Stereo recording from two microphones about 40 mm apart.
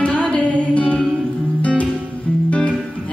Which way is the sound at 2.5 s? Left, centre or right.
Left.